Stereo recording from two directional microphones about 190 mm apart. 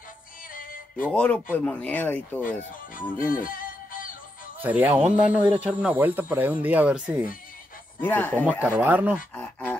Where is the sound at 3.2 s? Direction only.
45° left (ahead or behind).